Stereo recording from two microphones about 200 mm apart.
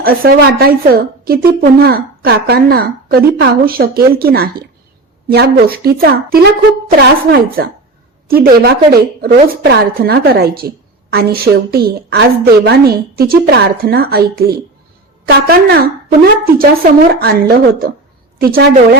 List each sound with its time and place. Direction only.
0.0 s a woman's voice: 50° right (ahead or behind)